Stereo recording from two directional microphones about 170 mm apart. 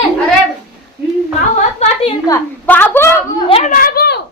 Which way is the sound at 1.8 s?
40° left (ahead or behind).